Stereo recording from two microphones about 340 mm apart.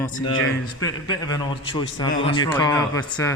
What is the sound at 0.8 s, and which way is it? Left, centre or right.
A man's voice, centre.